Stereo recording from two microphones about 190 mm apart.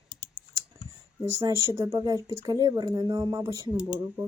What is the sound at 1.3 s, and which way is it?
Speech, 20° right (ahead or behind).